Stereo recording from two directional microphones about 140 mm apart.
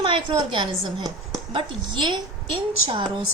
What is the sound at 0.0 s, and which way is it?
A woman's voice, 35° right (ahead or behind).